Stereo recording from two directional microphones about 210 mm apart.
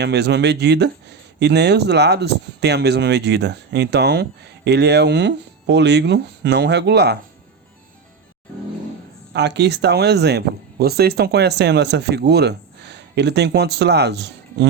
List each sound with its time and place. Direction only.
0.0 s speech: 55° right (ahead or behind)
9.3 s speech: 55° right (ahead or behind)